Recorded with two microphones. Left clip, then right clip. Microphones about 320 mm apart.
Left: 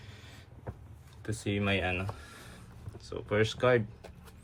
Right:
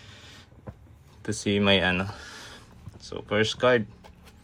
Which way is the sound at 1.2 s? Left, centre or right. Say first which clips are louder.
Right 9 dB; centre.